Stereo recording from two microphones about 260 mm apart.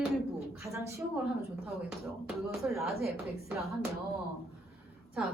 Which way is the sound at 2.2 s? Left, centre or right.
Centre.